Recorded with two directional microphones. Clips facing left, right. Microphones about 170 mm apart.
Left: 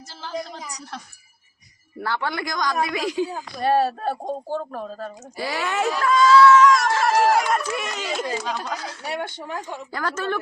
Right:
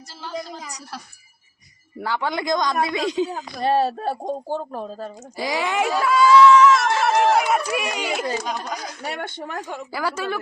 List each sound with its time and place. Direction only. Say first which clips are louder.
0.1 s music: even; centre (ahead or behind)
2.0 s speech: right 2 dB; 15° right (ahead or behind)
5.4 s speech: right 2 dB; 15° right (ahead or behind)
9.0 s speech: left 1 dB; 60° right (ahead or behind)
9.9 s speech: even; 10° right (ahead or behind)